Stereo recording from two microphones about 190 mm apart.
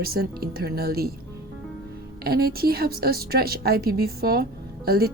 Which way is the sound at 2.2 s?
55° right (ahead or behind).